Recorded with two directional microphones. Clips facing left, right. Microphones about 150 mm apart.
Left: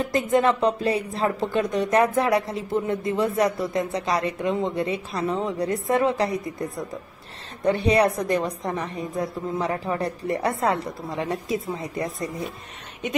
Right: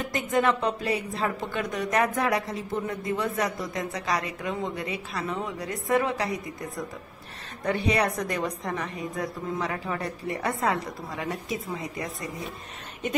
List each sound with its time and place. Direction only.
0.0 s speech: 30° left (ahead or behind)
7.6 s speech: 30° left (ahead or behind)